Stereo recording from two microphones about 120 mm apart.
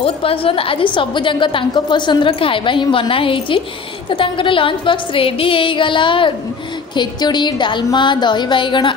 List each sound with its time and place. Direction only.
0.0 s a woman's voice: 50° left (ahead or behind)